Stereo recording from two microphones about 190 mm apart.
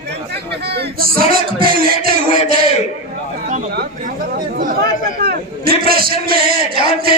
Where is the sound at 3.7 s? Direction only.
45° right (ahead or behind).